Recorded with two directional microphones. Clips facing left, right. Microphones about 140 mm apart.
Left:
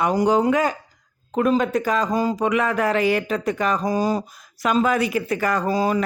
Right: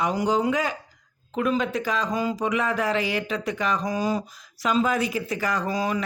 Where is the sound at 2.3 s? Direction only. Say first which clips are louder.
Left 4 dB; 60° left (ahead or behind).